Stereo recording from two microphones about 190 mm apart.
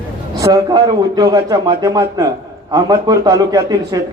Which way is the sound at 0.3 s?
20° right (ahead or behind).